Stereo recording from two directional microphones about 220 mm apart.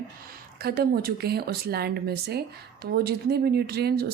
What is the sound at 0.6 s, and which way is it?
Speech, 45° right (ahead or behind).